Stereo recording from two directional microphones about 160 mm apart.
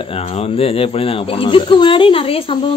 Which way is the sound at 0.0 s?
35° left (ahead or behind).